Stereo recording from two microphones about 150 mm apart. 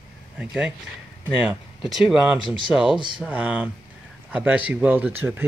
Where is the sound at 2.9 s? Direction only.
35° right (ahead or behind).